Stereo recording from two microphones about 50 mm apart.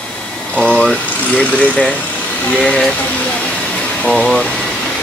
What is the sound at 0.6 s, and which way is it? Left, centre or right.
Speech, centre.